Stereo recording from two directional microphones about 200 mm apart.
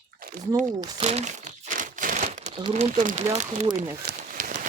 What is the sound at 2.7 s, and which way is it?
Speech, 35° right (ahead or behind).